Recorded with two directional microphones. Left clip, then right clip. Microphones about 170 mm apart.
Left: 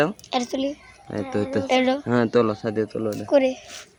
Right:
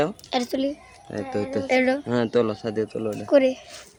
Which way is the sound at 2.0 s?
40° left (ahead or behind).